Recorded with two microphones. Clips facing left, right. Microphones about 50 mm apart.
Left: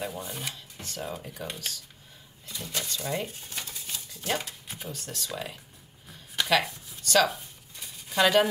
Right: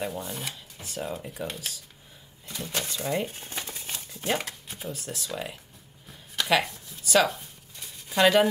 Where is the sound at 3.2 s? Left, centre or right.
Right.